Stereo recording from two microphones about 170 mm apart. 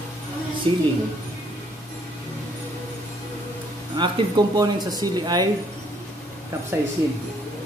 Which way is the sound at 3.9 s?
25° right (ahead or behind).